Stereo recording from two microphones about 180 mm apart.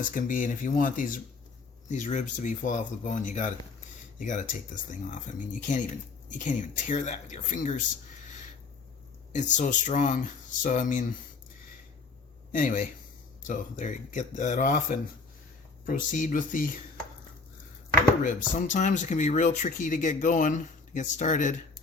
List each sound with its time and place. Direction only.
0.0 s speech: 50° left (ahead or behind)
9.3 s speech: 40° left (ahead or behind)
12.5 s speech: 50° left (ahead or behind)
18.2 s speech: 50° left (ahead or behind)